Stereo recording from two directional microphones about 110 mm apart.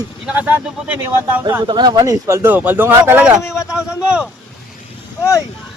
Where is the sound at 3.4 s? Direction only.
25° left (ahead or behind).